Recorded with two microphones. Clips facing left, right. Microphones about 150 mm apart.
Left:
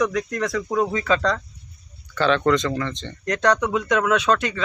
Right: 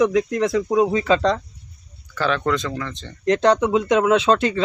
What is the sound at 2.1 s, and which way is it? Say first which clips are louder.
Speech: left 3 dB; 5° right (ahead or behind).